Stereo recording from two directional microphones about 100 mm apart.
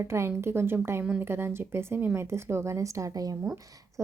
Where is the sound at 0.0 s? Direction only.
25° right (ahead or behind).